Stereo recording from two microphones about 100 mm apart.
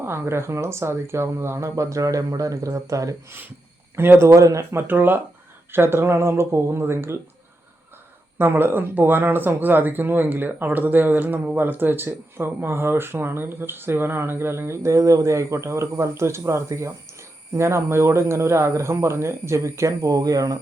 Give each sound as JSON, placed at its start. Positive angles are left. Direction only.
{"t": 0.0, "sound": "speech", "side_deg": -25}
{"t": 3.9, "sound": "speech", "side_deg": -25}
{"t": 4.4, "sound": "speech", "side_deg": -30}
{"t": 8.4, "sound": "speech", "side_deg": -20}